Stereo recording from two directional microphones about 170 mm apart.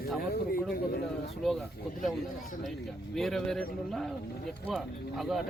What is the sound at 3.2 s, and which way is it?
Speech, centre (ahead or behind).